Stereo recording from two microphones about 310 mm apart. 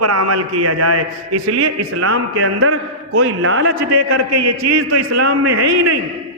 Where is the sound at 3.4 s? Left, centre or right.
Right.